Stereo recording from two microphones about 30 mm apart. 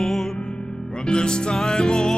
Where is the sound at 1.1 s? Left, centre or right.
Left.